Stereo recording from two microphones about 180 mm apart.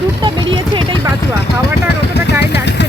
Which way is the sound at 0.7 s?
25° right (ahead or behind).